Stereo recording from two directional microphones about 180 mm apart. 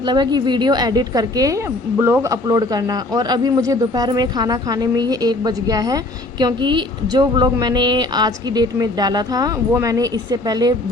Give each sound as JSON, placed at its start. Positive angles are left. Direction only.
{"t": 0.0, "sound": "a woman's voice", "side_deg": -25}